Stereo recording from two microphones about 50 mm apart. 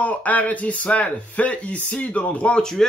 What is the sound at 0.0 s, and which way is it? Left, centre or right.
Speech, left.